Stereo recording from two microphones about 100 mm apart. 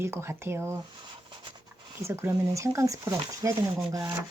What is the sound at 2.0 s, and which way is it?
Speech, 30° right (ahead or behind).